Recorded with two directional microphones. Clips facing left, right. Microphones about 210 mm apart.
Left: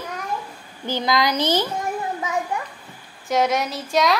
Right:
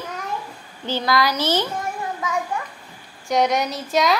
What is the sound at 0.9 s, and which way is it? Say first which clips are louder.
Speech: even; 20° left (ahead or behind).